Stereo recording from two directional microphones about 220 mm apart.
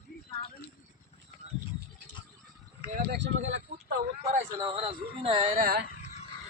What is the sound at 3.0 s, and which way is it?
Speech, 55° right (ahead or behind).